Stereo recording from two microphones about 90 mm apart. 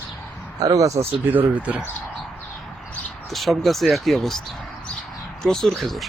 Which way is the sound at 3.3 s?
Centre (ahead or behind).